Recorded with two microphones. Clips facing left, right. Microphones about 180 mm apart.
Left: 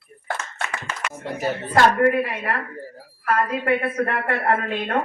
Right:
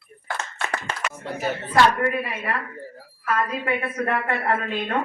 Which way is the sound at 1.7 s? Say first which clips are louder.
Left 3 dB; 50° left (ahead or behind).